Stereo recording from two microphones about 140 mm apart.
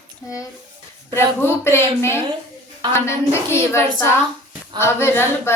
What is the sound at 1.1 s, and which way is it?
A child's voice, 15° left (ahead or behind).